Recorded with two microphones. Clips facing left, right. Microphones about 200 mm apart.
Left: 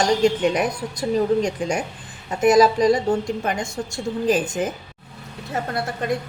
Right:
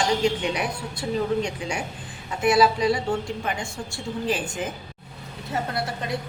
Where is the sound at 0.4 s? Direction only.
45° left (ahead or behind).